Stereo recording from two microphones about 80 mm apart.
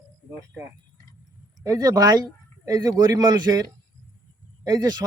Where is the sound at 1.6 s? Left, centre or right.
Right.